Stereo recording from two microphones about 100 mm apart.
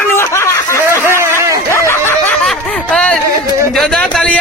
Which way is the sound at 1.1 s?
25° right (ahead or behind).